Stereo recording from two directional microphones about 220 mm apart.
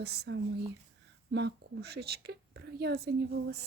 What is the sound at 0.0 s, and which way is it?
Speech, 50° right (ahead or behind).